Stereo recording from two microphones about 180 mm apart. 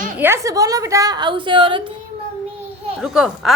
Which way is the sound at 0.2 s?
15° right (ahead or behind).